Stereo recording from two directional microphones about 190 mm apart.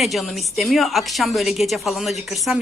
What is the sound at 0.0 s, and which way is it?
A woman's voice, centre (ahead or behind).